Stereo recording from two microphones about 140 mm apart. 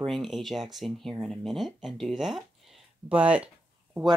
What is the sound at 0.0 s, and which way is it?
Speech, centre (ahead or behind).